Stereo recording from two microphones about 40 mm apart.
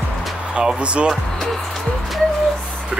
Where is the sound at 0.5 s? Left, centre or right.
Right.